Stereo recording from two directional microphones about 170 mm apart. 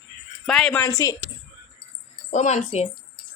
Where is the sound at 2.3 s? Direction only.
45° left (ahead or behind).